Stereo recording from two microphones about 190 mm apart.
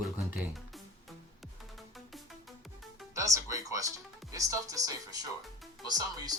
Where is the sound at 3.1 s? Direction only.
15° right (ahead or behind).